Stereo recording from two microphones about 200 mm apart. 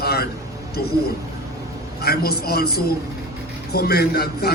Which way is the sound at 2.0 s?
50° left (ahead or behind).